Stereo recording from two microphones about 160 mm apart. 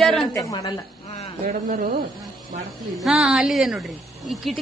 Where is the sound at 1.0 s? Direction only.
40° left (ahead or behind).